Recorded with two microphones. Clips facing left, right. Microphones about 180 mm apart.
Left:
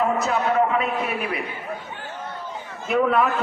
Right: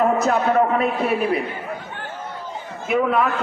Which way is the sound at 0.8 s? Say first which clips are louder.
Right 5 dB; 35° right (ahead or behind).